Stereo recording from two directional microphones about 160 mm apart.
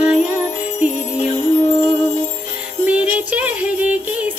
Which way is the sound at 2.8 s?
10° right (ahead or behind).